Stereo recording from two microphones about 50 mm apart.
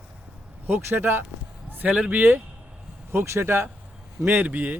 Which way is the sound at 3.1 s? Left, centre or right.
Right.